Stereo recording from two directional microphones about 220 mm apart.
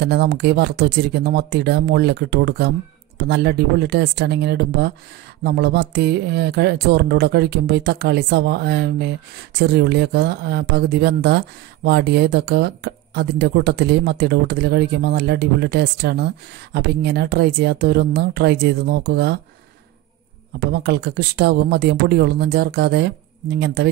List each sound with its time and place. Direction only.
0.0 s speech: 50° right (ahead or behind)
20.5 s speech: 45° right (ahead or behind)